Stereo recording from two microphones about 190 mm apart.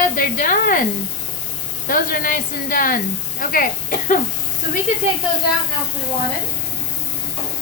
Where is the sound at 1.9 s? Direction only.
45° left (ahead or behind).